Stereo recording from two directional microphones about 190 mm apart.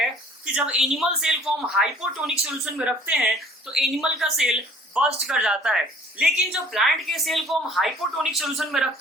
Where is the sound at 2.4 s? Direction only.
Centre (ahead or behind).